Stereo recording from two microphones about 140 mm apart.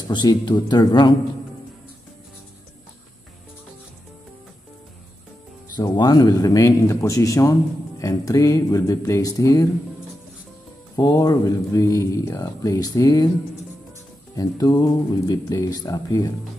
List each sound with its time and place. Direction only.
0.1 s speech: 30° left (ahead or behind)
5.8 s speech: 30° left (ahead or behind)
11.0 s speech: 25° left (ahead or behind)
14.3 s speech: 25° left (ahead or behind)